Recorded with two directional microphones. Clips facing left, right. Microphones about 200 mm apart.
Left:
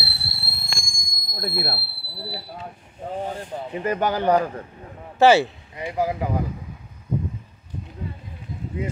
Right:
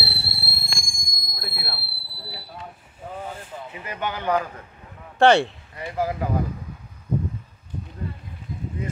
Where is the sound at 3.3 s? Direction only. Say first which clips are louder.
Left 5 dB; 45° left (ahead or behind).